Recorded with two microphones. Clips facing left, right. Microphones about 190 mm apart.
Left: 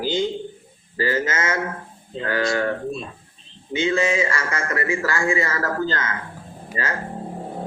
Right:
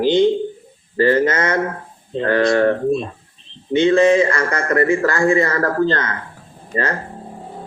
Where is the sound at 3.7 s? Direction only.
60° right (ahead or behind).